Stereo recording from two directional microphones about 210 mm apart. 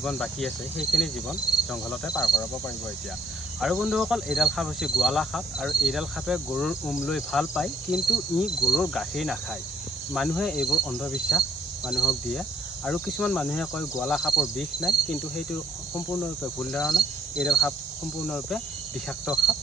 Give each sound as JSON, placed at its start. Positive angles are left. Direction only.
{"t": 0.0, "sound": "cricket", "side_deg": 5}
{"t": 2.0, "sound": "cricket", "side_deg": 20}
{"t": 3.6, "sound": "cricket", "side_deg": 0}
{"t": 16.7, "sound": "cricket", "side_deg": 0}